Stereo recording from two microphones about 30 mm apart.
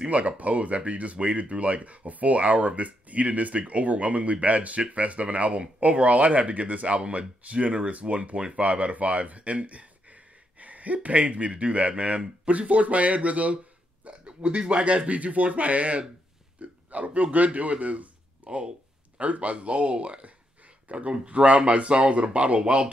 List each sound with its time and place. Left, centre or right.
0.0 s a sound: right
0.4 s speech: right
14.2 s speech: right
15.0 s speech: right
16.6 s a sound: right
16.9 s a man's voice: right
21.3 s speech: right